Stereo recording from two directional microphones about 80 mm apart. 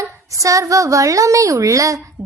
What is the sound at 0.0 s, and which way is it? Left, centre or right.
A woman's voice, right.